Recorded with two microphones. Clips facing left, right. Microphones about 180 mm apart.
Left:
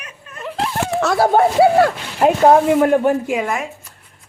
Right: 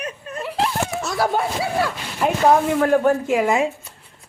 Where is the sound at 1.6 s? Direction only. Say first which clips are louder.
Left 10 dB; 55° left (ahead or behind).